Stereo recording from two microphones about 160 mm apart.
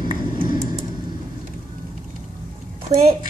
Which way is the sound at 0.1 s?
55° left (ahead or behind).